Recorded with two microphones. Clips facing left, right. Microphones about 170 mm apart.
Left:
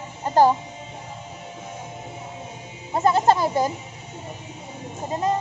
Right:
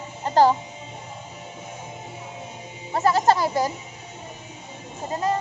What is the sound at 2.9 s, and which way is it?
Music, 20° left (ahead or behind).